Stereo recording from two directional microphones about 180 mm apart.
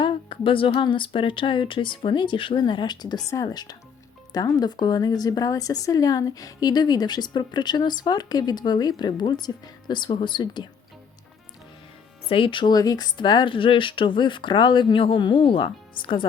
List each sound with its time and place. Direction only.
0.0 s speech: 30° left (ahead or behind)
12.3 s speech: 30° left (ahead or behind)